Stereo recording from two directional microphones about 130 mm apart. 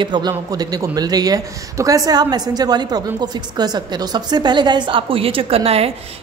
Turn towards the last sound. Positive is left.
turn(degrees=-50)  # may be behind; listen again after turning